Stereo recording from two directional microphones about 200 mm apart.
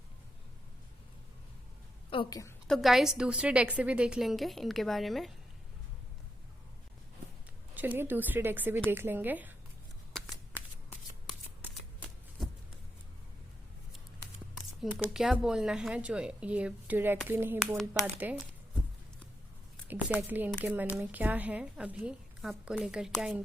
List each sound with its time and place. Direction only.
2.0 s a woman's voice: 25° left (ahead or behind)
2.6 s speech: centre (ahead or behind)
7.7 s speech: 10° right (ahead or behind)
14.5 s speech: centre (ahead or behind)
19.9 s speech: 10° right (ahead or behind)